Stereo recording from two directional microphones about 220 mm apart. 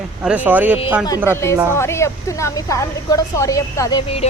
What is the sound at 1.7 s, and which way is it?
A woman's voice, 10° left (ahead or behind).